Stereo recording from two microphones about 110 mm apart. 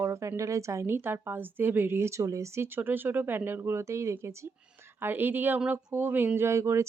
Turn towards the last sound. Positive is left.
turn(degrees=-25)  # may be behind; listen again after turning